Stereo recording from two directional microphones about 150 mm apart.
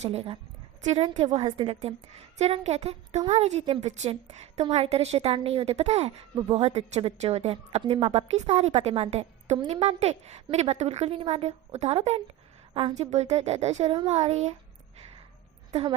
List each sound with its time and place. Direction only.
0.0 s a woman's voice: 40° right (ahead or behind)
1.5 s a woman's voice: 35° right (ahead or behind)
15.7 s a woman's voice: 40° right (ahead or behind)